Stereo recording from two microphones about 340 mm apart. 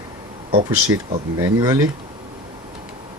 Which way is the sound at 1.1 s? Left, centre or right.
Centre.